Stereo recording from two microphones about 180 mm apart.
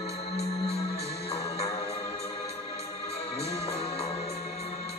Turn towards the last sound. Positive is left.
turn(degrees=35)  # may be behind; listen again after turning